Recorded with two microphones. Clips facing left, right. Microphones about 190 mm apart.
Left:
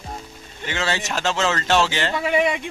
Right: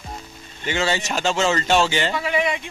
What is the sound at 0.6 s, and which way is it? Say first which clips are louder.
Speech: right 2 dB; centre (ahead or behind).